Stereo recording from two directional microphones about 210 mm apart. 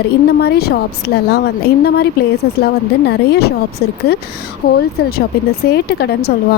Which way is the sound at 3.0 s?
50° left (ahead or behind).